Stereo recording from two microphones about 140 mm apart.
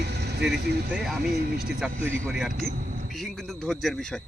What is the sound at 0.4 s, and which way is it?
Speech, 5° right (ahead or behind).